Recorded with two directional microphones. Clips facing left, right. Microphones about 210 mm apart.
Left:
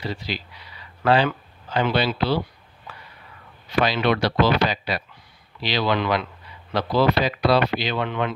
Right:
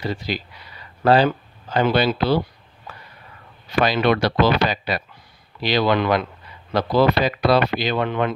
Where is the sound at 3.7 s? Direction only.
45° right (ahead or behind).